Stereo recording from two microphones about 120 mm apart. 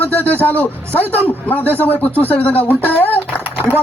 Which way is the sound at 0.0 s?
15° left (ahead or behind).